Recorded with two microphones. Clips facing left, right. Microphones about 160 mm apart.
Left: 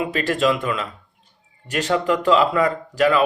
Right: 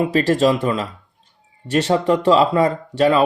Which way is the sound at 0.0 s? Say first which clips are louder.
Right 5 dB; 35° right (ahead or behind).